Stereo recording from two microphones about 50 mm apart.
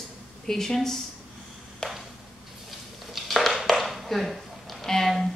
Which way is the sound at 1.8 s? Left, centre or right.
Centre.